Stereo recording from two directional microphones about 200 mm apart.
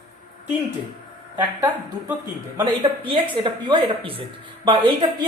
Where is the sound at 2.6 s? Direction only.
25° right (ahead or behind).